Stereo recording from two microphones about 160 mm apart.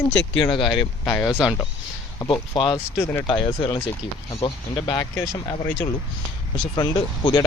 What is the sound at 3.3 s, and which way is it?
Speech, 30° left (ahead or behind).